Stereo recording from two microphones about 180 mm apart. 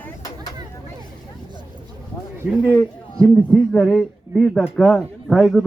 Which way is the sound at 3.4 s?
5° left (ahead or behind).